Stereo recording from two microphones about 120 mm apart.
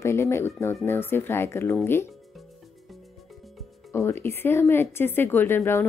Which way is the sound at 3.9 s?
20° left (ahead or behind).